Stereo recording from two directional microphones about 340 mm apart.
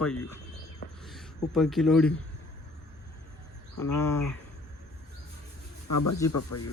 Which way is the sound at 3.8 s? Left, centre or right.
Left.